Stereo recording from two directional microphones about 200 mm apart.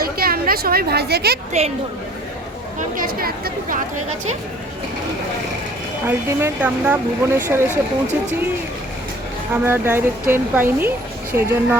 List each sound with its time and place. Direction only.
0.0 s speech: 50° right (ahead or behind)
2.7 s a woman's voice: 45° right (ahead or behind)
6.1 s a woman's voice: 10° right (ahead or behind)
9.5 s a woman's voice: 10° right (ahead or behind)